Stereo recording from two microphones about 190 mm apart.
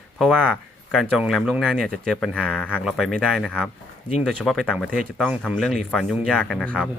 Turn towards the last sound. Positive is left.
turn(degrees=5)  # may be behind; listen again after turning